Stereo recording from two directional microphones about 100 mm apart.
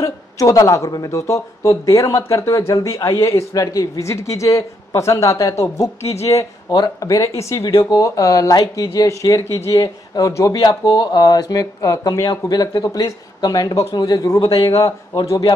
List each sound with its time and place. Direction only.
0.0 s speech: 30° left (ahead or behind)
10.5 s speech: 45° left (ahead or behind)